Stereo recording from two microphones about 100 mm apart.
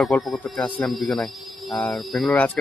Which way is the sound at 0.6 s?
15° left (ahead or behind).